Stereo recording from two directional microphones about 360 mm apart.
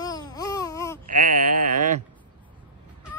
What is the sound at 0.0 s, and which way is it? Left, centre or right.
Baby cry, centre.